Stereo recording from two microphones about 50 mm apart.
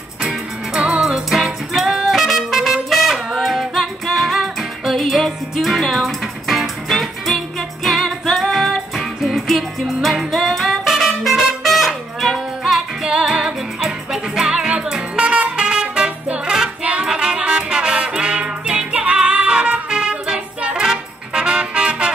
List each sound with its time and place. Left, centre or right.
0.2 s music: centre
1.0 s music: centre